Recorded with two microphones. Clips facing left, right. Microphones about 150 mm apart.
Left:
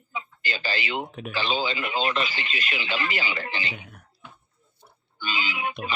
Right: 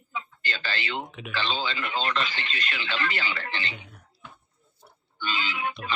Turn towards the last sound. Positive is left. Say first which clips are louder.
# left 1 dB
turn(degrees=10)  # may be behind; listen again after turning